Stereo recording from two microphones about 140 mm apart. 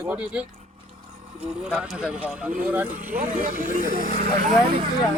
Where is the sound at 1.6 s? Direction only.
5° right (ahead or behind).